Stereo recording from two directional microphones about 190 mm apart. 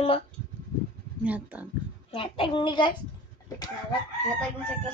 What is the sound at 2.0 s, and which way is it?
Speech, 30° left (ahead or behind).